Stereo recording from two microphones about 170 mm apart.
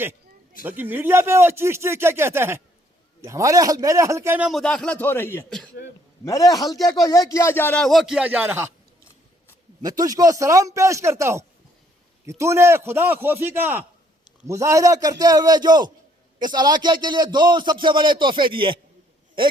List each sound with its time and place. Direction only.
0.6 s a man's voice: 10° right (ahead or behind)
9.8 s a man's voice: 20° right (ahead or behind)